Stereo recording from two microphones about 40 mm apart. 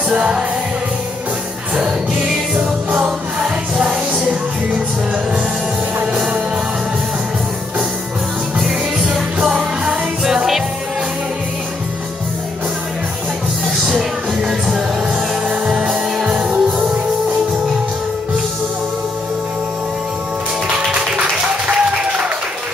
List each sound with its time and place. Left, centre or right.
0.1 s music: right
3.4 s music: right
8.5 s music: centre
15.6 s music: right
20.9 s music: right